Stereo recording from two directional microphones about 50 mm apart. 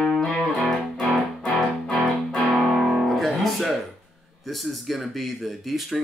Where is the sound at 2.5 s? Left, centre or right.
Centre.